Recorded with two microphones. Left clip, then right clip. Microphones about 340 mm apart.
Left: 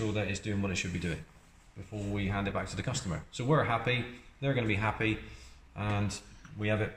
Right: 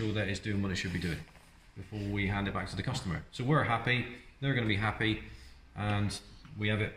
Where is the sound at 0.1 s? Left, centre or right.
Centre.